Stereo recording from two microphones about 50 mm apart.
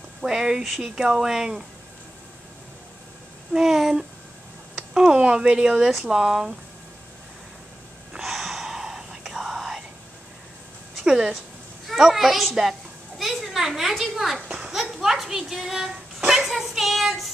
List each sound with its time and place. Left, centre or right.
0.2 s speech: centre
3.5 s speech: centre
5.1 s speech: right
5.9 s a child's voice: centre
8.2 s whispering: centre
11.1 s a woman's voice: centre
12.0 s a child's voice: centre
13.2 s children playing: centre
14.8 s a sound: centre